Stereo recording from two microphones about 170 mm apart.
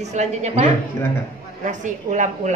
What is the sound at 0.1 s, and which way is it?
Speech, 40° right (ahead or behind).